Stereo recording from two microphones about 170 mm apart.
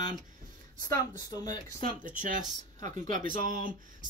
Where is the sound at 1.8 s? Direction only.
55° right (ahead or behind).